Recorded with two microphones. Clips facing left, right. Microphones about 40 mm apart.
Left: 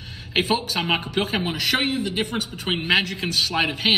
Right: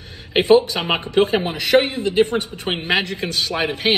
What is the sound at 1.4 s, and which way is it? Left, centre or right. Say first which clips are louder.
Speech: right 6 dB; right.